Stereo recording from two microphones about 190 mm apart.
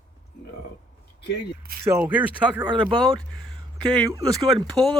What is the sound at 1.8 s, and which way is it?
Speech, 10° right (ahead or behind).